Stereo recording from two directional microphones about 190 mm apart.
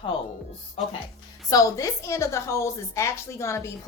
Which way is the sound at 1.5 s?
20° left (ahead or behind).